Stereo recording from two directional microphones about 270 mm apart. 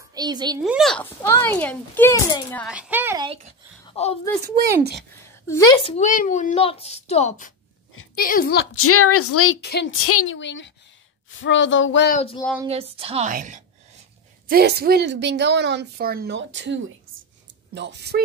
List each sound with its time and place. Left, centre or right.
0.1 s a woman's voice: centre
0.6 s speech: centre
2.7 s a woman's voice: centre
3.8 s a woman's voice: left
5.7 s a woman's voice: left
8.7 s a woman's voice: left
9.6 s a woman's voice: left
10.0 s speech: left
12.1 s speech: left
12.6 s a woman's voice: right